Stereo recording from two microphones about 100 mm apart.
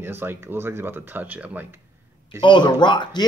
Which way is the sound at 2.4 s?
50° left (ahead or behind).